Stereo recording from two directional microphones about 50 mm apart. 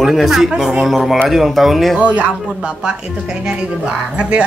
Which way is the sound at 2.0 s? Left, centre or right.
Right.